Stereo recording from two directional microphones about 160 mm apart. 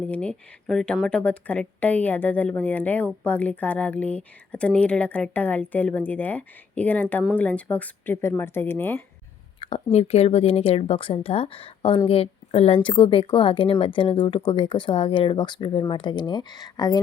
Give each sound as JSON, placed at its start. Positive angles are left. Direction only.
{"t": 0.0, "sound": "speech", "side_deg": 5}
{"t": 9.6, "sound": "a woman's voice", "side_deg": 35}